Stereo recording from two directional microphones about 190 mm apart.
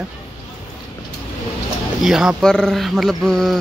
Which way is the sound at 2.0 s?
Centre (ahead or behind).